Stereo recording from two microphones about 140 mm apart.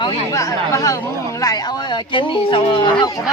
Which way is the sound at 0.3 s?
25° left (ahead or behind).